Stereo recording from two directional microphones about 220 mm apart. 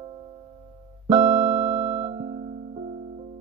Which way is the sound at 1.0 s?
30° right (ahead or behind).